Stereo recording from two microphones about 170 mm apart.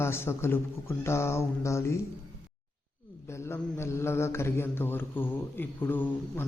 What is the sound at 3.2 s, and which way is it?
Speech, 15° left (ahead or behind).